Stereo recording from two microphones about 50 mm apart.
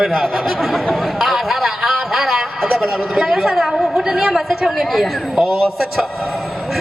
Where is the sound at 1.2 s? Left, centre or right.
Centre.